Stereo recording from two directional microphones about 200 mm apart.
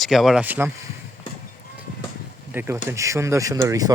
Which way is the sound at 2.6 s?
15° right (ahead or behind).